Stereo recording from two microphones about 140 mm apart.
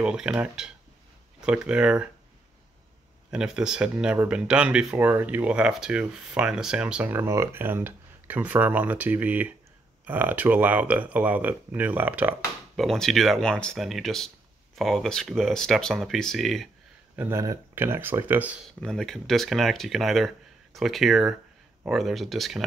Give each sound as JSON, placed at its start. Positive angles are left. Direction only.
{"t": 0.0, "sound": "speech", "side_deg": -5}
{"t": 3.3, "sound": "speech", "side_deg": -5}
{"t": 12.7, "sound": "speech", "side_deg": 0}
{"t": 17.1, "sound": "speech", "side_deg": -15}
{"t": 18.8, "sound": "speech", "side_deg": 0}